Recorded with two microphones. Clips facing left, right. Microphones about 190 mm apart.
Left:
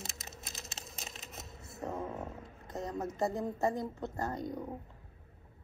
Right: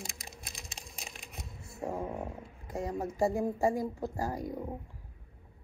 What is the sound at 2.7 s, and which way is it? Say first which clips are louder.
Speech: right 3 dB; 10° right (ahead or behind).